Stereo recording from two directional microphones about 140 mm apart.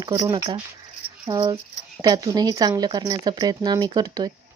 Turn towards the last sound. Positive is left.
turn(degrees=-30)  # may be behind; listen again after turning